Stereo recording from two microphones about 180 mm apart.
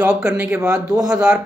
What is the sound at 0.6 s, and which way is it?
Speech, 20° right (ahead or behind).